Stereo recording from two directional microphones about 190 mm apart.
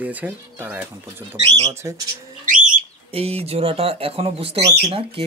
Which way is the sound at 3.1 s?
30° right (ahead or behind).